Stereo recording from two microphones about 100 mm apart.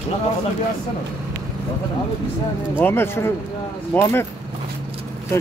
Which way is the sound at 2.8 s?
25° left (ahead or behind).